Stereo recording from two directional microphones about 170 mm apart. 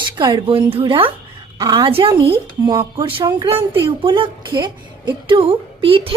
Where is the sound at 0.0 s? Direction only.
25° right (ahead or behind).